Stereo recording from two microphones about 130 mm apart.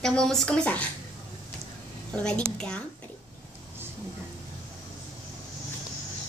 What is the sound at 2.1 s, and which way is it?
Speech, 5° left (ahead or behind).